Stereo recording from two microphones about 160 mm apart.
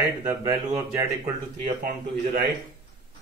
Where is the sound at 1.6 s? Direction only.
60° right (ahead or behind).